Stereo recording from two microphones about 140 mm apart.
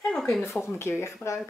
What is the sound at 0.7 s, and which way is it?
Speech, 20° left (ahead or behind).